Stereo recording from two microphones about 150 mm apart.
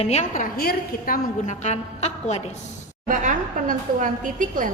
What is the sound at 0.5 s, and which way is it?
A woman's voice, 90° left.